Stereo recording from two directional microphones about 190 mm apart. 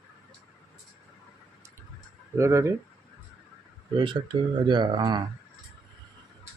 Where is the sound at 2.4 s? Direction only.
15° right (ahead or behind).